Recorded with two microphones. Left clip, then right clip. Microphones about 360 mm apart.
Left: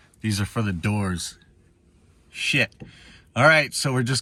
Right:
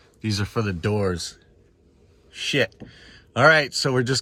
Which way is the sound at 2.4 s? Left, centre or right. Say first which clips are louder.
Left 1 dB; left.